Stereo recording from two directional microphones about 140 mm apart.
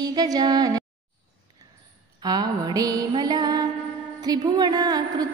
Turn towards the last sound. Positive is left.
turn(degrees=-30)  # may be behind; listen again after turning